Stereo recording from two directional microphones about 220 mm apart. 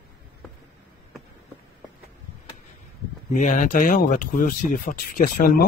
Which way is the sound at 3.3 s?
35° left (ahead or behind).